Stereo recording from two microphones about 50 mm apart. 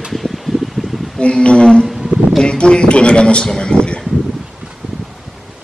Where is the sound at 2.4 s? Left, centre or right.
Centre.